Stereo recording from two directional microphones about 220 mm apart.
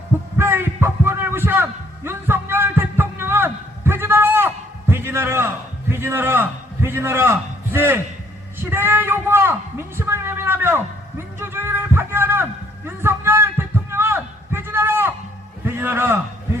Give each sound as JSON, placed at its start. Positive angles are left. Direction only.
{"t": 0.3, "sound": "heart sounds", "side_deg": -10}
{"t": 5.9, "sound": "a man's voice", "side_deg": -10}
{"t": 11.3, "sound": "music", "side_deg": -10}
{"t": 15.6, "sound": "a man's voice", "side_deg": -10}